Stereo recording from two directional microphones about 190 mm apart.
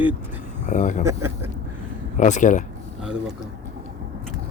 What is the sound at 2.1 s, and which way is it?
Speech, 40° left (ahead or behind).